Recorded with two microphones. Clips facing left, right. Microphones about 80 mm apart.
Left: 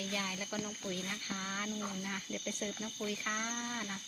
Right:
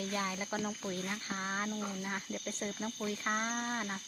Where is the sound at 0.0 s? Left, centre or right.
Right.